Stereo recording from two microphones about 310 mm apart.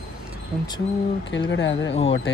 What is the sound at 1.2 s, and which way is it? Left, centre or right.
Speech, left.